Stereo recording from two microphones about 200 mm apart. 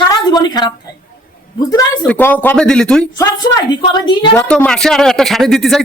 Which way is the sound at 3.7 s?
25° left (ahead or behind).